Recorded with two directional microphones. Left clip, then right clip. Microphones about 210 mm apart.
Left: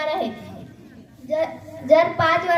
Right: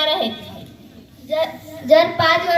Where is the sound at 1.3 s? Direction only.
20° left (ahead or behind).